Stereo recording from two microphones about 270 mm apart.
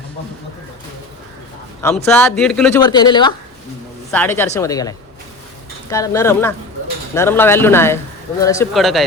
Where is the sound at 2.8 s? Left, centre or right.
Centre.